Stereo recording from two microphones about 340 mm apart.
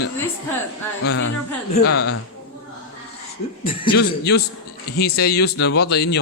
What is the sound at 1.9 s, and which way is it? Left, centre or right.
Speech, left.